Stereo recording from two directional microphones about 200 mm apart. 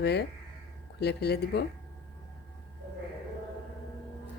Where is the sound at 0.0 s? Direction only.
55° left (ahead or behind).